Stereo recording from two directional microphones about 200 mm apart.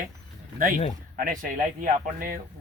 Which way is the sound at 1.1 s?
45° right (ahead or behind).